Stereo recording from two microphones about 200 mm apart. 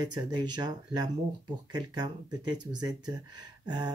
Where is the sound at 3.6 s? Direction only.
20° right (ahead or behind).